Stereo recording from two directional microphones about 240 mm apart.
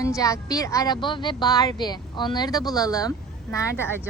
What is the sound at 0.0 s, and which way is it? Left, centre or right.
Speech, centre.